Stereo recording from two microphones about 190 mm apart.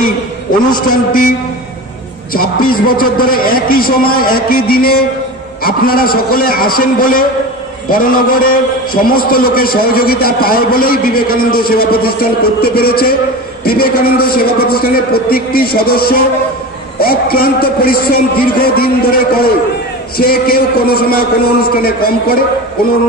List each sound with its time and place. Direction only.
0.8 s a man's voice: 50° left (ahead or behind)
2.3 s a man's voice: 50° left (ahead or behind)